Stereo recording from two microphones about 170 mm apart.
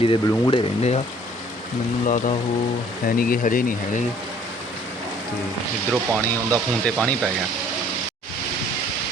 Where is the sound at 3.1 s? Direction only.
55° left (ahead or behind).